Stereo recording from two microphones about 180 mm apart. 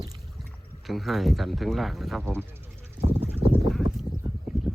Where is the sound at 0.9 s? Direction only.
Centre (ahead or behind).